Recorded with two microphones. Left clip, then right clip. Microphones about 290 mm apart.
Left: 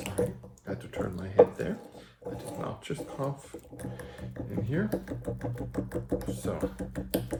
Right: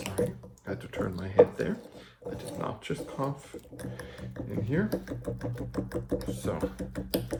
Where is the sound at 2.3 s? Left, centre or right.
Centre.